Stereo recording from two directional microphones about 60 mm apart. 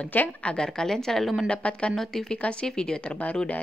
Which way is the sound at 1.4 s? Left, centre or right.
Centre.